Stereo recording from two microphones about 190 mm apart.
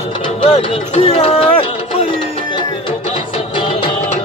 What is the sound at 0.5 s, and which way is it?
Music, 30° left (ahead or behind).